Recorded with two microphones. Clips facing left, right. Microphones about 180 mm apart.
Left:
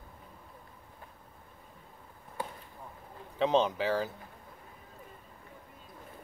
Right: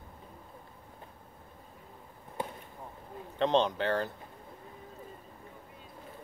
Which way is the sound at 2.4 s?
20° right (ahead or behind).